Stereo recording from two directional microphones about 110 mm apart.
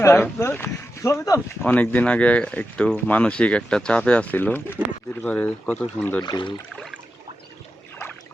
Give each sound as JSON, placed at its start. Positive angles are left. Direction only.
{"t": 0.0, "sound": "speech", "side_deg": 25}
{"t": 1.6, "sound": "speech", "side_deg": 15}
{"t": 6.2, "sound": "speech", "side_deg": 45}